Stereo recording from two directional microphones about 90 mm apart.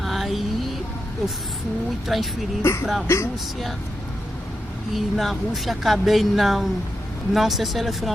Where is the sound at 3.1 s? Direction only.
30° left (ahead or behind).